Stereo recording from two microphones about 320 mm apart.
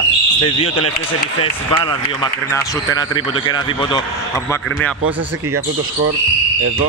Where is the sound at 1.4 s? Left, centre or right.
Centre.